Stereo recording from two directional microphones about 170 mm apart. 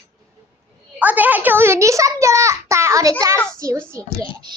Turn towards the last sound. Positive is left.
turn(degrees=-25)  # may be behind; listen again after turning